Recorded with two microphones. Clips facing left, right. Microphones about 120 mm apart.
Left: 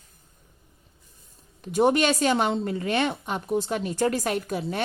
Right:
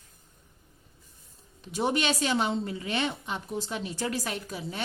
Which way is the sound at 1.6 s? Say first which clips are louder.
Left 7 dB; 50° left (ahead or behind).